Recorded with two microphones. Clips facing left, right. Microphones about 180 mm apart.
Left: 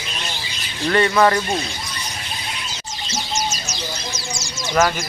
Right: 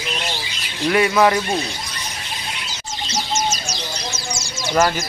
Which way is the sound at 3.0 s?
25° left (ahead or behind).